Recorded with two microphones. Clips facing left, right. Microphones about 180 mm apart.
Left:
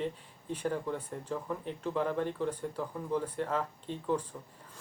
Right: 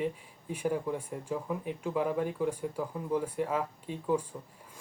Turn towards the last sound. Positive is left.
turn(degrees=-10)  # may be behind; listen again after turning